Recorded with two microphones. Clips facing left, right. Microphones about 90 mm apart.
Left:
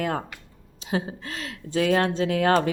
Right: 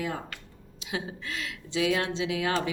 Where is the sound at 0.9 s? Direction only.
40° left (ahead or behind).